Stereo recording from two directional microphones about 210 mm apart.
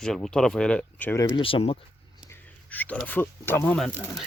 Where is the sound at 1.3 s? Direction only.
25° left (ahead or behind).